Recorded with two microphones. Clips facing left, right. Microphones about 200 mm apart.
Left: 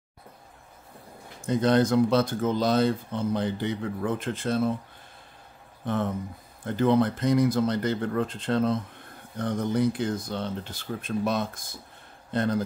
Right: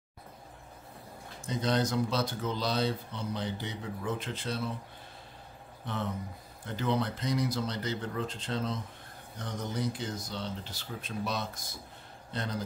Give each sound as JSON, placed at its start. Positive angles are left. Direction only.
{"t": 1.4, "sound": "speech", "side_deg": 55}
{"t": 5.9, "sound": "speech", "side_deg": 50}